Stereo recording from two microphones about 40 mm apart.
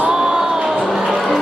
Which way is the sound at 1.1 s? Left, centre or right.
Centre.